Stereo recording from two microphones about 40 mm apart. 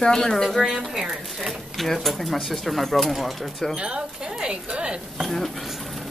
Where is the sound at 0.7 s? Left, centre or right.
Centre.